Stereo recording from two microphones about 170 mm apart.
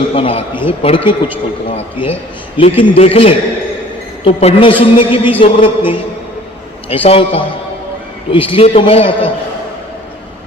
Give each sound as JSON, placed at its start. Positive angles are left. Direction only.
{"t": 0.1, "sound": "a woman's voice", "side_deg": 35}